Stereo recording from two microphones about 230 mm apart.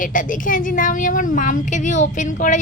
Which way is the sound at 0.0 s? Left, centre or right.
Left.